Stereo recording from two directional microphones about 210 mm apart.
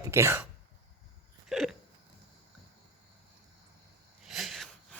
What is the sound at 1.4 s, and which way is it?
Hiccup, centre (ahead or behind).